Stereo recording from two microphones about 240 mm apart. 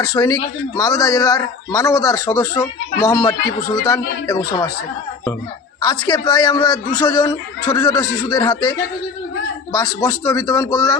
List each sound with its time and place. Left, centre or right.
0.0 s a man's voice: centre
5.8 s a man's voice: centre
9.7 s a man's voice: centre